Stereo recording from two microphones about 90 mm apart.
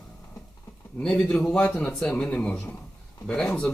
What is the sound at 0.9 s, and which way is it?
Speech, 10° left (ahead or behind).